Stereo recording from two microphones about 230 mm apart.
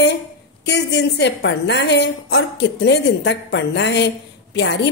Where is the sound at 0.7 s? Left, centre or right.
Left.